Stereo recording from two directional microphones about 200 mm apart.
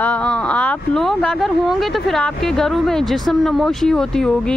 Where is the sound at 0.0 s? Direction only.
5° left (ahead or behind).